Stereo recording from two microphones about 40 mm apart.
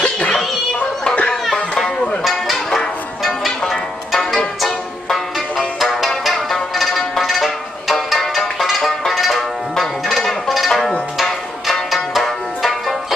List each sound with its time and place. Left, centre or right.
0.0 s music: left
2.2 s music: centre
10.7 s music: centre
11.1 s music: centre